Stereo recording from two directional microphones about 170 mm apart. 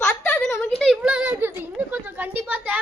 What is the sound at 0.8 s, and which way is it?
A child's voice, centre (ahead or behind).